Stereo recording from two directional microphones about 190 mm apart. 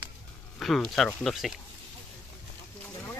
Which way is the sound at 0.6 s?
Centre (ahead or behind).